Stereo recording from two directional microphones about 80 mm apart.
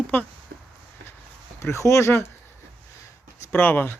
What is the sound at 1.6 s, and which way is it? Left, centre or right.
Speech, left.